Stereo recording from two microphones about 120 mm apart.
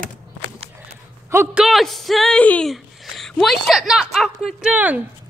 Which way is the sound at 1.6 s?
Centre (ahead or behind).